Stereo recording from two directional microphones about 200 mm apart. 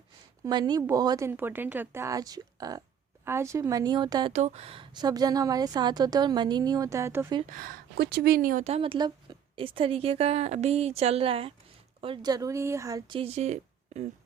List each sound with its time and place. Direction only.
0.4 s speech: 20° right (ahead or behind)
4.3 s a woman's voice: 35° right (ahead or behind); by 7.3 s 15° right (ahead or behind)
7.5 s a woman's voice: 45° right (ahead or behind)